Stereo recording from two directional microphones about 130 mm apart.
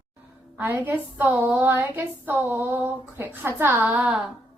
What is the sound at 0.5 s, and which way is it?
A woman's voice, 15° right (ahead or behind).